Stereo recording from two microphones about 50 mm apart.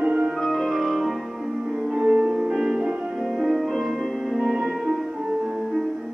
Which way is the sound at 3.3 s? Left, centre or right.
Centre.